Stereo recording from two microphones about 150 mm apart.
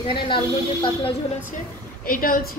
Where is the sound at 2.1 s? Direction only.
70° left (ahead or behind).